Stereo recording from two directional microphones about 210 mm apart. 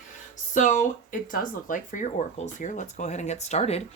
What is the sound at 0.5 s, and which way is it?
Speech, 40° left (ahead or behind).